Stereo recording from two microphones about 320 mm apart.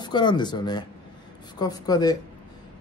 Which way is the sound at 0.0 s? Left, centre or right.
Centre.